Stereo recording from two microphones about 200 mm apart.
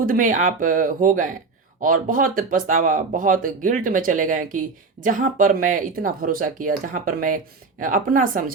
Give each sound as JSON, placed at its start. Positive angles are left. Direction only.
{"t": 0.0, "sound": "speech", "side_deg": -45}